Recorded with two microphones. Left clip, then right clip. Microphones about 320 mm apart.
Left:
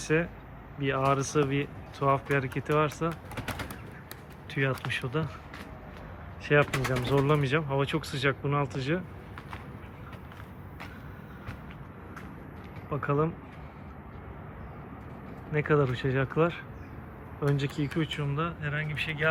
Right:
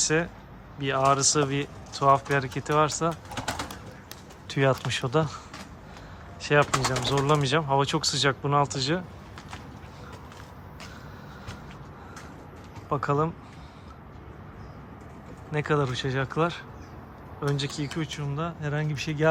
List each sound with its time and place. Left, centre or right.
0.0 s speech: centre
4.4 s speech: centre
6.4 s speech: centre
12.9 s speech: centre
15.5 s speech: centre